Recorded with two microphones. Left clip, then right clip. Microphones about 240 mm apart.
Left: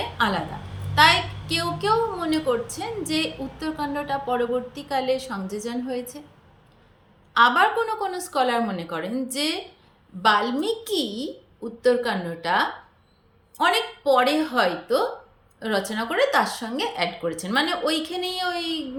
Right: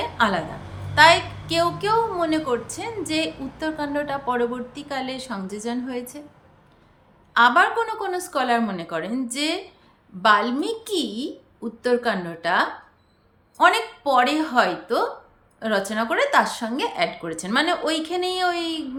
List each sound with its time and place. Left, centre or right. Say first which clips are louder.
0.2 s a woman's voice: right 2 dB; centre
7.3 s a woman's voice: right 1 dB; centre